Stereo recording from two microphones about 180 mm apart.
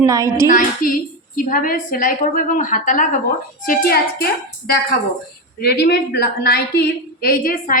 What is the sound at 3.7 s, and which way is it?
Speech, 60° left (ahead or behind).